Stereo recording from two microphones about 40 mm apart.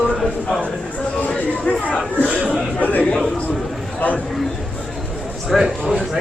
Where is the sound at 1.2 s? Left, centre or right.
Left.